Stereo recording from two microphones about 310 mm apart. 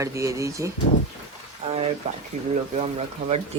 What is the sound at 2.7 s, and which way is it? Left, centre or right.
Speech, right.